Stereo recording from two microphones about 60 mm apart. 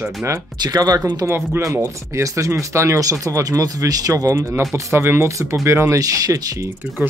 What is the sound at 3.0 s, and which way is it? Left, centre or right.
Speech, right.